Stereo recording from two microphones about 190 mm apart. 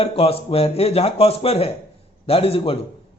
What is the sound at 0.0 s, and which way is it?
Speech, 30° left (ahead or behind).